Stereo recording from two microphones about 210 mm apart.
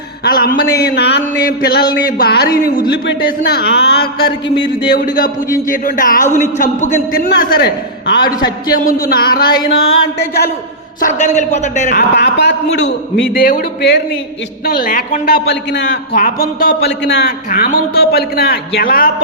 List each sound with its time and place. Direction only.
0.3 s a man's voice: 45° left (ahead or behind)
4.4 s a man's voice: 25° left (ahead or behind)
4.9 s a man's voice: 40° left (ahead or behind)
8.3 s a man's voice: 20° left (ahead or behind)
8.7 s a man's voice: 40° left (ahead or behind)
9.8 s a sound: 70° left (ahead or behind)
11.0 s a man's voice: 35° left (ahead or behind)
11.9 s a man's voice: 50° left (ahead or behind)
15.4 s a man's voice: 55° left (ahead or behind)
16.6 s a man's voice: 45° left (ahead or behind)